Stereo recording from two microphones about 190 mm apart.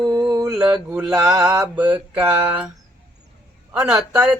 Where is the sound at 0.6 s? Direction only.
20° right (ahead or behind).